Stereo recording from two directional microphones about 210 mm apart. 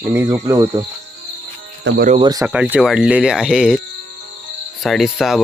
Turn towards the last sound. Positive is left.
turn(degrees=0)  # may be behind; listen again after turning